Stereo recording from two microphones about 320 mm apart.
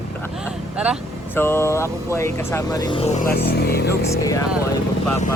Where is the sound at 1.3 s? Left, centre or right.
Centre; by 3.9 s left.